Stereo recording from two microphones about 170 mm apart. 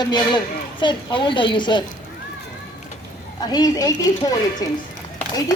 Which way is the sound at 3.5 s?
20° left (ahead or behind).